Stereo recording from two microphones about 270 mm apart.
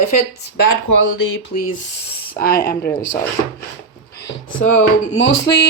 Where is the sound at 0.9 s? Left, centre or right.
Left.